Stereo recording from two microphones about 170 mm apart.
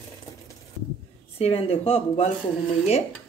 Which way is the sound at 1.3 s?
35° left (ahead or behind).